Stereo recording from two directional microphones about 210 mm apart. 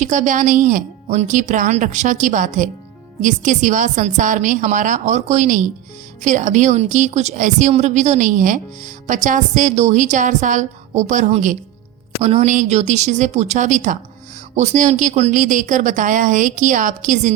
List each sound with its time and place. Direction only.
0.0 s speech: 35° right (ahead or behind)